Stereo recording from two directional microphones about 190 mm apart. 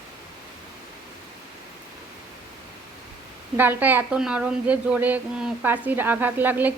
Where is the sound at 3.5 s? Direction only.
10° right (ahead or behind).